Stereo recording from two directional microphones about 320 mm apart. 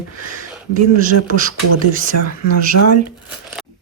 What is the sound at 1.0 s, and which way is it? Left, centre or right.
Speech, right.